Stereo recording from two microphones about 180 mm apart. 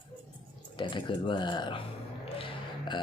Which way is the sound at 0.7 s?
25° left (ahead or behind).